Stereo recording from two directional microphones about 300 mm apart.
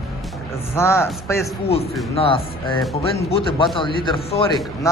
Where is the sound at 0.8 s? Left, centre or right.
Centre.